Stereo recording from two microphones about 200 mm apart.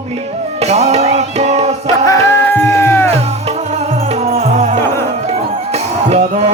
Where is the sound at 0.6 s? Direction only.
35° right (ahead or behind).